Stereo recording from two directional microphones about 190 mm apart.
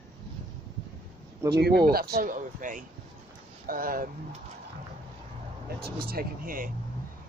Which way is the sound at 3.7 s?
45° right (ahead or behind).